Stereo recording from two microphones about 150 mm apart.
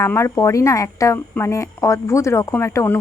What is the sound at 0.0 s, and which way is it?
Speech, 15° left (ahead or behind).